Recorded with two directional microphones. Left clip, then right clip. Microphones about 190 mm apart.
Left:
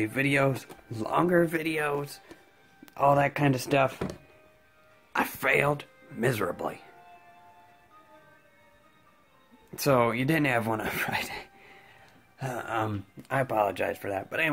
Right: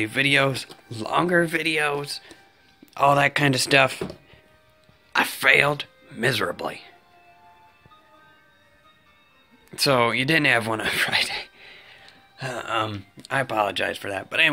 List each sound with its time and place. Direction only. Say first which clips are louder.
0.0 s speech: right 6 dB; 5° left (ahead or behind)
5.1 s speech: right 7 dB; 5° left (ahead or behind)
9.7 s speech: right 4 dB; 10° left (ahead or behind)